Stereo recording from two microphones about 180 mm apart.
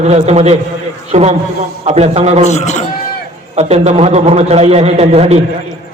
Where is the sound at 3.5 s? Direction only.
40° right (ahead or behind).